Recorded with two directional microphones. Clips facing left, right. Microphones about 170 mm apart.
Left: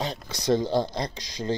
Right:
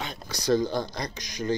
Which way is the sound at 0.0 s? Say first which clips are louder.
Left 3 dB; 30° left (ahead or behind).